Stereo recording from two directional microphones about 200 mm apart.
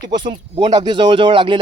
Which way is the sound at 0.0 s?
20° right (ahead or behind).